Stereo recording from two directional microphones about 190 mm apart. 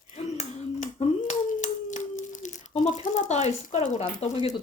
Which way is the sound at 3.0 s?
40° left (ahead or behind).